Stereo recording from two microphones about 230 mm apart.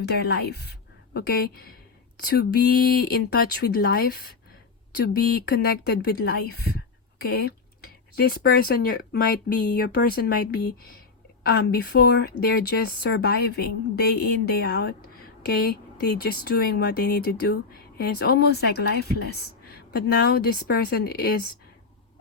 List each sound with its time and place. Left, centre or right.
0.0 s a woman's voice: left